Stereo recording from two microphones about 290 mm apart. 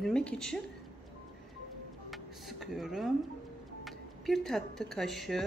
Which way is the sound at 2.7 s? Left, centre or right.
Centre.